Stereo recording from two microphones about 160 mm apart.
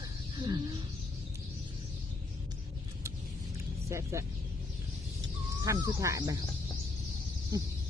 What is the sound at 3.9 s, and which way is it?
Speech, 20° right (ahead or behind).